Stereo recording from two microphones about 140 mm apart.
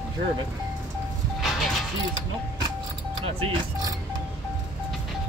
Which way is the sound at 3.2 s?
40° right (ahead or behind).